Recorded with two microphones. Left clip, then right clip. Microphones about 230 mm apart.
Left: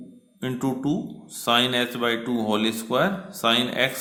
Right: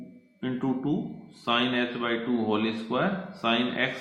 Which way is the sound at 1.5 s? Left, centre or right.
Left.